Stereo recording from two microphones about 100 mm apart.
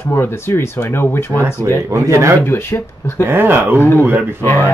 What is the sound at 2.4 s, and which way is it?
Speech, 20° left (ahead or behind).